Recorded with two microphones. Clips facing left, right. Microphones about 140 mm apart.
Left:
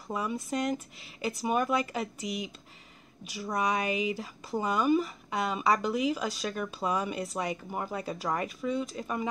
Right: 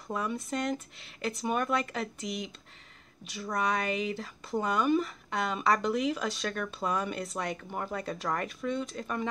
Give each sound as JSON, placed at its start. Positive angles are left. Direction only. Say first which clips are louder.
{"t": 0.1, "sound": "speech", "louder": "left 1 dB", "side_deg": 5}
{"t": 3.5, "sound": "speech", "louder": "left 1 dB", "side_deg": 10}